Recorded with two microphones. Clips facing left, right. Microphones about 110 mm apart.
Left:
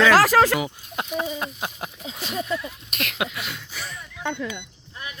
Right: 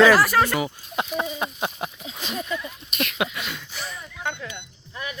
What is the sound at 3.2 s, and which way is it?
Speech, 5° left (ahead or behind).